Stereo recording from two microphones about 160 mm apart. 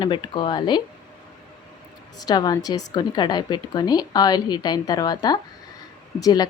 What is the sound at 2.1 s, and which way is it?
Speech, 25° left (ahead or behind).